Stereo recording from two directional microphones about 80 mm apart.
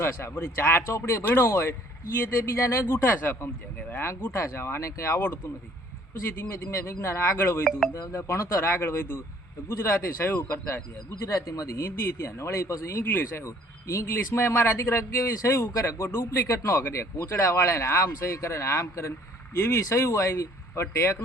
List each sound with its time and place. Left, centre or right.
0.0 s speech: left
11.3 s speech: left